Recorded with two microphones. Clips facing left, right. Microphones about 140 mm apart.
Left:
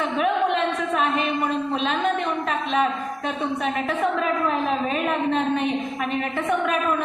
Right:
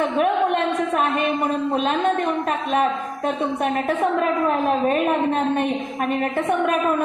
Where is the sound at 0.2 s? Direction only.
45° right (ahead or behind).